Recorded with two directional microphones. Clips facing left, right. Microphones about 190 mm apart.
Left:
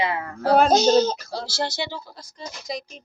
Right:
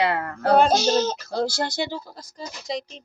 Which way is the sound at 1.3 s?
50° right (ahead or behind).